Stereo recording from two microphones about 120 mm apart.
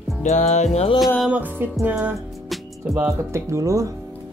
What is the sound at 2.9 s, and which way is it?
Speech, 25° right (ahead or behind).